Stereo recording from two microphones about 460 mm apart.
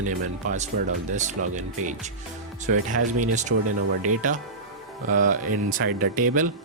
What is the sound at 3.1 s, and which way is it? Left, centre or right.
Speech, centre.